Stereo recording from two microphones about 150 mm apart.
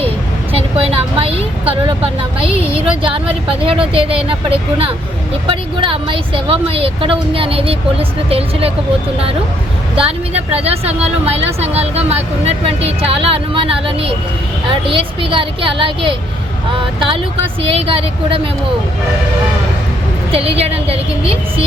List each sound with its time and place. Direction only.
0.5 s a woman's voice: 40° right (ahead or behind)
9.9 s a woman's voice: 40° right (ahead or behind)
20.3 s a woman's voice: 40° right (ahead or behind)